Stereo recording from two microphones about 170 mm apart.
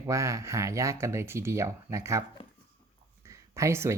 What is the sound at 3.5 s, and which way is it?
Speech, 15° right (ahead or behind).